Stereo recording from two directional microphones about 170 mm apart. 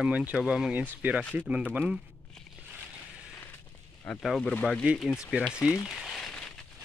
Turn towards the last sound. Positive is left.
turn(degrees=5)  # may be behind; listen again after turning